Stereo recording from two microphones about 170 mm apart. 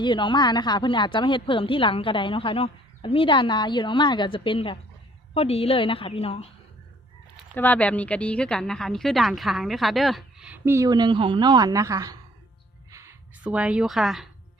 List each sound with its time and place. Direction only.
0.0 s a woman's voice: 25° left (ahead or behind)
7.5 s a woman's voice: 10° left (ahead or behind); by 12.1 s 20° right (ahead or behind)
12.9 s a sound: 15° right (ahead or behind)